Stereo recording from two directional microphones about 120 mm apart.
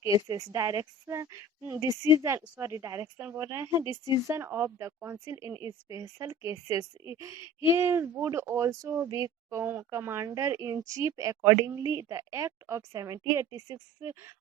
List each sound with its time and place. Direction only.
0.0 s a woman's voice: 25° right (ahead or behind)